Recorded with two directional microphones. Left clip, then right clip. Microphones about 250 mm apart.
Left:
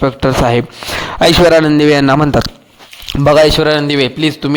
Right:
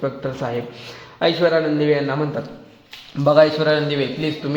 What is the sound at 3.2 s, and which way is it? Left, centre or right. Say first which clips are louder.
A man's voice: left 6 dB; left.